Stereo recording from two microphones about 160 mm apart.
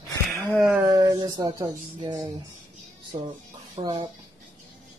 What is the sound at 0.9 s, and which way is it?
Speech, 20° right (ahead or behind).